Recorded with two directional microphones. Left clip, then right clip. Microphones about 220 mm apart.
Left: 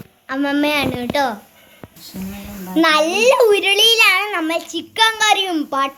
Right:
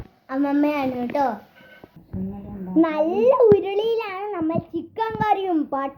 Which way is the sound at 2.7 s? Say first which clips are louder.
Left 5 dB; 20° left (ahead or behind).